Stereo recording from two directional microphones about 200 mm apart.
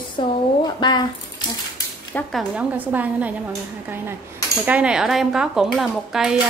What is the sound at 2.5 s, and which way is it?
Speech, 10° right (ahead or behind).